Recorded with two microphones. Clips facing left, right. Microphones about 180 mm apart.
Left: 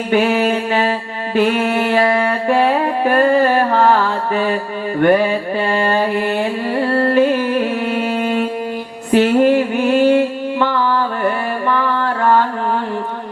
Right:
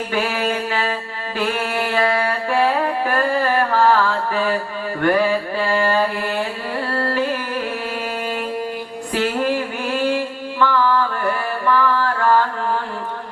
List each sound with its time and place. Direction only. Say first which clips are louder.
0.1 s a sound: left 9 dB; 20° left (ahead or behind)
1.4 s music: left 7 dB; 20° left (ahead or behind)
4.9 s mantra: left 4 dB; 20° left (ahead or behind)
6.9 s carnatic music: left 8 dB; 20° left (ahead or behind)
9.1 s a sound: left 9 dB; 20° left (ahead or behind)
11.7 s music: right 2 dB; 20° left (ahead or behind)